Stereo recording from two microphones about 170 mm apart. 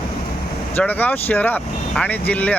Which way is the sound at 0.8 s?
10° left (ahead or behind).